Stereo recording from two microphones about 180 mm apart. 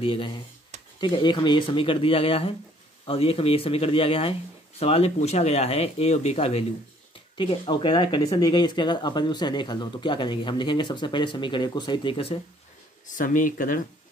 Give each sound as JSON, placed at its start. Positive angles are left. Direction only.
{"t": 0.0, "sound": "speech", "side_deg": 30}
{"t": 13.0, "sound": "speech", "side_deg": 45}